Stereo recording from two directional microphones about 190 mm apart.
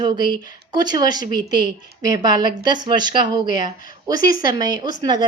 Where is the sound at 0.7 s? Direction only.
20° right (ahead or behind).